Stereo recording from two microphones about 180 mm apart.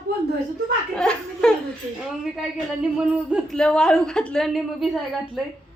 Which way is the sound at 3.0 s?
Centre (ahead or behind).